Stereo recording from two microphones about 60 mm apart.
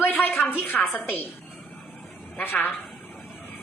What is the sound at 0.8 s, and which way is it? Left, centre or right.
Speech, left.